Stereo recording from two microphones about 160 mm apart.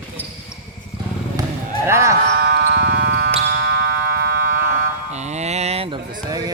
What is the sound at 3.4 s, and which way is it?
Music, 75° right (ahead or behind).